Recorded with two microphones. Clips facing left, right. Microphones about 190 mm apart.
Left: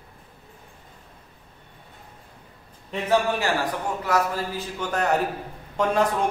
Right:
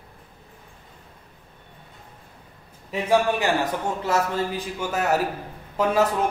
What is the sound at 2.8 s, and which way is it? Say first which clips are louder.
A man's voice: right 2 dB; 15° right (ahead or behind).